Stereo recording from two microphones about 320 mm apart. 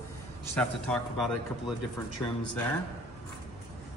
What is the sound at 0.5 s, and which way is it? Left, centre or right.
A man's voice, centre.